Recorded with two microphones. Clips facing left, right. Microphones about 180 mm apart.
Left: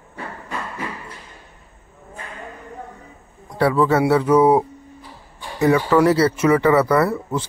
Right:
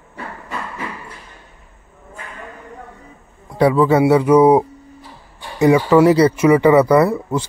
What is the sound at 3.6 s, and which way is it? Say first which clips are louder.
Speech: right 4 dB; 15° right (ahead or behind).